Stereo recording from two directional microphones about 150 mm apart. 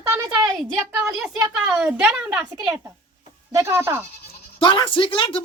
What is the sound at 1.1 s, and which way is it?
Speech, 5° right (ahead or behind).